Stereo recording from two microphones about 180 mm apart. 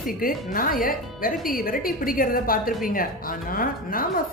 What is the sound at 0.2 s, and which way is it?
Speech, 55° left (ahead or behind).